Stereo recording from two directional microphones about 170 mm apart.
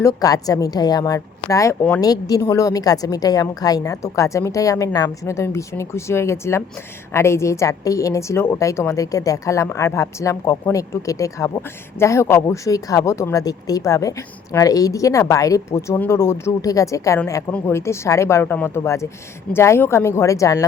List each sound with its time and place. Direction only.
0.0 s a woman's voice: 20° left (ahead or behind)